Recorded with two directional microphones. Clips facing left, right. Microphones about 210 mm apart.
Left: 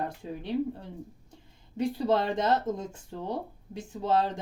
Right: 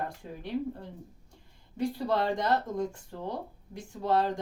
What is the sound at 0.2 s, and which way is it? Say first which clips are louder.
Speech: left 5 dB; 20° left (ahead or behind).